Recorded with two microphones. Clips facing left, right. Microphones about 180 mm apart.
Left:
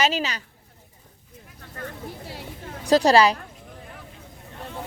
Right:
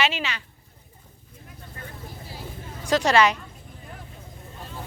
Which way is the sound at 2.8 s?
35° left (ahead or behind).